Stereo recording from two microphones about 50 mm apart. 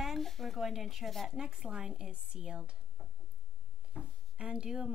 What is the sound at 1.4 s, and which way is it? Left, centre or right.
A woman's voice, centre.